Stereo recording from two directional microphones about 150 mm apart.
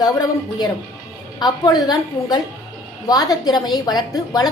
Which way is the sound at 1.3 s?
25° left (ahead or behind).